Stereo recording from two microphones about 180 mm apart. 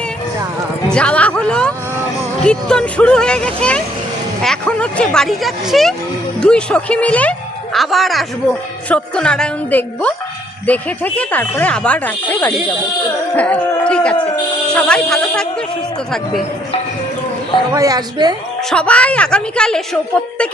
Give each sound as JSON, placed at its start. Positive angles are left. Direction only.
{"t": 0.9, "sound": "speech", "side_deg": 5}
{"t": 13.3, "sound": "a sound", "side_deg": 5}
{"t": 14.7, "sound": "speech", "side_deg": 5}
{"t": 17.7, "sound": "a woman's voice", "side_deg": -20}
{"t": 18.7, "sound": "speech", "side_deg": 5}